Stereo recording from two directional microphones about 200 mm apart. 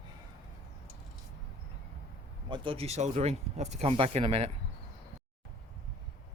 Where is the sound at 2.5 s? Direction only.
25° right (ahead or behind).